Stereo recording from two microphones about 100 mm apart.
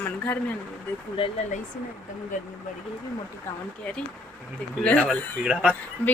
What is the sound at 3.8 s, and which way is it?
A woman's voice, 10° left (ahead or behind).